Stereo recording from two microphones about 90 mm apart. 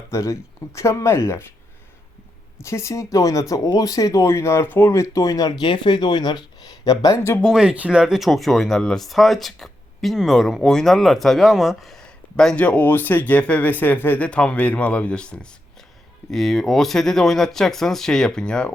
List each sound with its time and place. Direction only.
0.1 s speech: 35° left (ahead or behind)
2.6 s speech: 30° left (ahead or behind); by 6.4 s 55° left (ahead or behind)
6.8 s speech: 40° left (ahead or behind)
7.5 s speech: 10° right (ahead or behind); by 12.6 s 5° left (ahead or behind)
12.6 s speech: 20° left (ahead or behind)